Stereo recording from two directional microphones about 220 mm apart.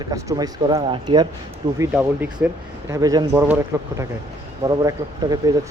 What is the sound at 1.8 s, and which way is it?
Speech, 10° right (ahead or behind).